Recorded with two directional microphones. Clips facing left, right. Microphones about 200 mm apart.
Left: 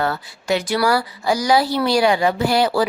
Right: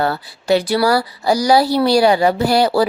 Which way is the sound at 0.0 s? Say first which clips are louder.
Right 3 dB; 35° right (ahead or behind).